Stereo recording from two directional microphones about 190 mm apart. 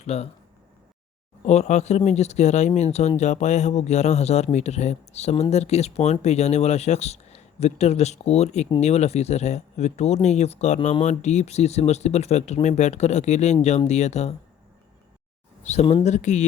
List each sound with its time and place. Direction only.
0.0 s speech: 35° left (ahead or behind)
1.5 s speech: 35° left (ahead or behind)
15.6 s speech: 35° left (ahead or behind)